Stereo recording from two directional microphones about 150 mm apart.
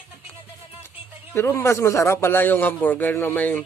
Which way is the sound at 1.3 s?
20° left (ahead or behind).